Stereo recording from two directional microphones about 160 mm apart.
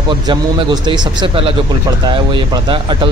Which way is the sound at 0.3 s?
30° right (ahead or behind).